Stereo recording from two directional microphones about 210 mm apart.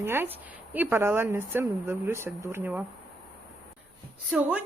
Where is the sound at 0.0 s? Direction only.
10° right (ahead or behind).